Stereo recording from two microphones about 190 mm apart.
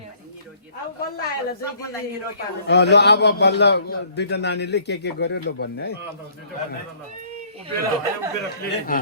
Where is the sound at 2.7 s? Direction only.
65° left (ahead or behind).